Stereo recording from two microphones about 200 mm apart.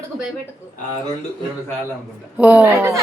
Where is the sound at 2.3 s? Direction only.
10° right (ahead or behind).